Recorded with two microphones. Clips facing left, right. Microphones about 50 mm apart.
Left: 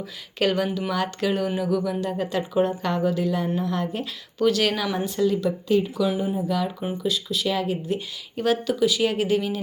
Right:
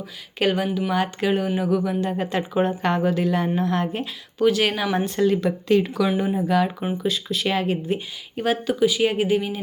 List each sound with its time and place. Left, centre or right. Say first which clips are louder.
0.3 s speech: right 1 dB; centre; by 3.8 s right
4.4 s speech: right 2 dB; centre
4.9 s speech: right 2 dB; right
6.1 s speech: right 3 dB; right
7.9 s speech: right 2 dB; right